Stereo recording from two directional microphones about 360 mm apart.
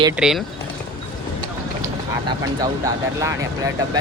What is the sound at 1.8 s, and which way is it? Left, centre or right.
Speech, centre.